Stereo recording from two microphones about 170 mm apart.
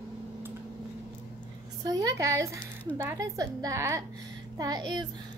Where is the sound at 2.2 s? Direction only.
20° right (ahead or behind).